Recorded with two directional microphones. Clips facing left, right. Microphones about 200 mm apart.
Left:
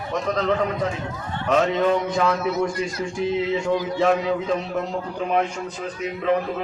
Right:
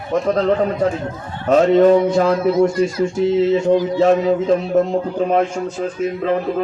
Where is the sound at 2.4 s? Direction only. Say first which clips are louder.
Right 8 dB; 50° right (ahead or behind).